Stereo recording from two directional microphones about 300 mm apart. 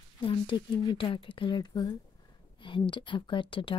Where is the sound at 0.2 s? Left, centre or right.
Centre.